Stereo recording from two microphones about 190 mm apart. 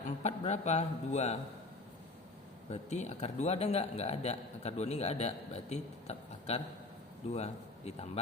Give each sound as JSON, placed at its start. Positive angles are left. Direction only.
{"t": 0.0, "sound": "a man's voice", "side_deg": 35}
{"t": 2.6, "sound": "a man's voice", "side_deg": 35}